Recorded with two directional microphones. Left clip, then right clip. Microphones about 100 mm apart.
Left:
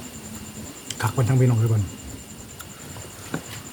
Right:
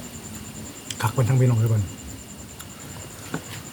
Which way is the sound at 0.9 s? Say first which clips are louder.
Even; 25° left (ahead or behind).